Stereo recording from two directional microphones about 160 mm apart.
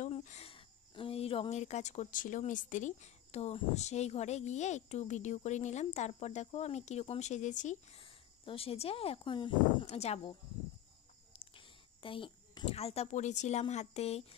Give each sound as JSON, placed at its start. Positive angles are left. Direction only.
{"t": 0.0, "sound": "speech", "side_deg": 50}
{"t": 8.0, "sound": "speech", "side_deg": 35}
{"t": 11.3, "sound": "speech", "side_deg": 30}